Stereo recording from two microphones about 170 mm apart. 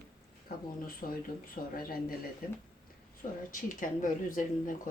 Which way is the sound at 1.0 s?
55° left (ahead or behind).